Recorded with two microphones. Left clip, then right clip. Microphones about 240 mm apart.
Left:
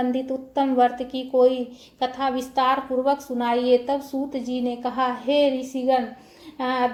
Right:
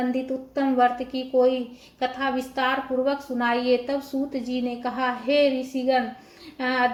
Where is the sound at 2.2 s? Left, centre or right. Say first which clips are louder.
Left 4 dB; left.